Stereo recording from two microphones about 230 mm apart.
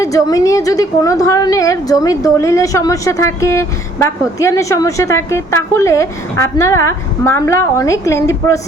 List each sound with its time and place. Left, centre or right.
0.0 s a woman's voice: centre